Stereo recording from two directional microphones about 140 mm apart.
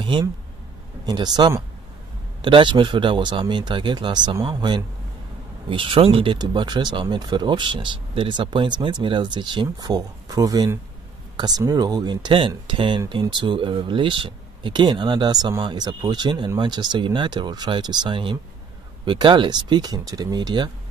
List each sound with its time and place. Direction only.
0.0 s speech: 35° right (ahead or behind)